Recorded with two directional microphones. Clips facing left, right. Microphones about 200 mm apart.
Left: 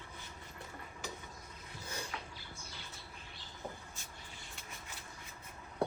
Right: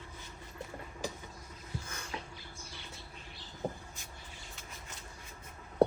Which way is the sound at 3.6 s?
35° right (ahead or behind).